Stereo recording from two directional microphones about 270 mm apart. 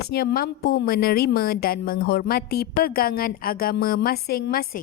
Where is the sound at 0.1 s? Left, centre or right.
Left.